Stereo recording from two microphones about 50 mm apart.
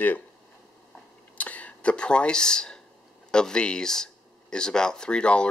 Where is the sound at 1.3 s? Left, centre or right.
Left.